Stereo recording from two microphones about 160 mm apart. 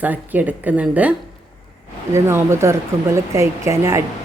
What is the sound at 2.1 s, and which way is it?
Speech, 15° right (ahead or behind).